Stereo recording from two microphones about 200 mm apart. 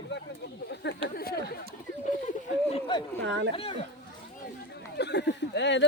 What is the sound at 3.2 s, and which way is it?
Speech, 60° right (ahead or behind).